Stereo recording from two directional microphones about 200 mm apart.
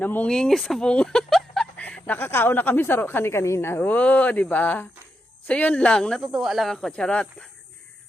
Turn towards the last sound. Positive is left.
turn(degrees=5)  # may be behind; listen again after turning